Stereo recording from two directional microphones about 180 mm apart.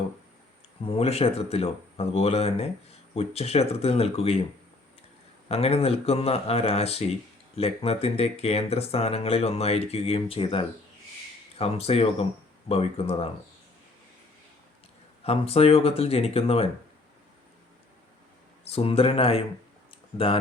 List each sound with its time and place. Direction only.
0.9 s speech: 35° left (ahead or behind)
5.5 s speech: 35° left (ahead or behind)
15.2 s speech: 35° left (ahead or behind)
18.6 s speech: 35° left (ahead or behind)